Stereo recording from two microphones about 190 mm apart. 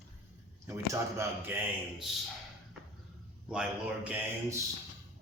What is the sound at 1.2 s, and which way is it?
Speech, 10° right (ahead or behind).